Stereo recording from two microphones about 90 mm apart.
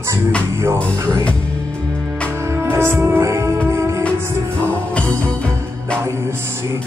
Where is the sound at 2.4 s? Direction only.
30° right (ahead or behind).